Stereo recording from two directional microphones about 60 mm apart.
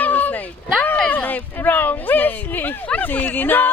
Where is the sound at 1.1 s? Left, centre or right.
Left.